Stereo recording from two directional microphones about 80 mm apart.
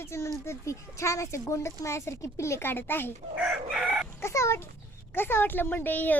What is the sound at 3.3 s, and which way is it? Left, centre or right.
Chicken, centre.